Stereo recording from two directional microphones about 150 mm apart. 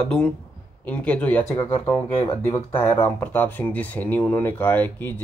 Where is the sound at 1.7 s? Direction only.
40° left (ahead or behind).